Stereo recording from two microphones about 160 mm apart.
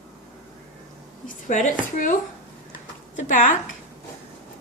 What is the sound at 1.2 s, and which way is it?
Speech, 50° left (ahead or behind).